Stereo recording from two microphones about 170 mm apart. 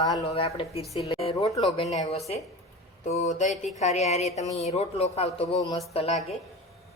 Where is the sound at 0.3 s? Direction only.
35° left (ahead or behind).